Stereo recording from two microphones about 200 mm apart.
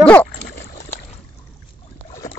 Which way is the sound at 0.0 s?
5° left (ahead or behind).